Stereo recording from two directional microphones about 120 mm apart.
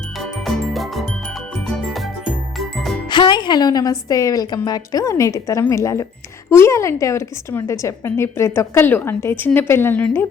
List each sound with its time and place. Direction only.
0.2 s music: centre (ahead or behind)
3.1 s a woman's voice: 40° left (ahead or behind); by 10.2 s 15° left (ahead or behind)